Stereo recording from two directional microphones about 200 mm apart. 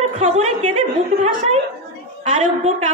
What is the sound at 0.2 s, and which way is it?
A woman's voice, 30° right (ahead or behind).